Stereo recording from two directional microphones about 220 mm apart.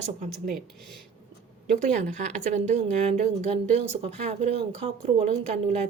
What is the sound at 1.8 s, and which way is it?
Speech, 30° right (ahead or behind).